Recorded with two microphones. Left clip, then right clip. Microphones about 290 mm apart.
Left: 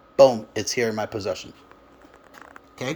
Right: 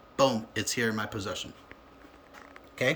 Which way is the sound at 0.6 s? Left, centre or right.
Right.